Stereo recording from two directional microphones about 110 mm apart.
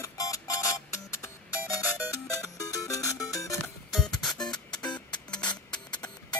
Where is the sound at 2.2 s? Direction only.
30° left (ahead or behind).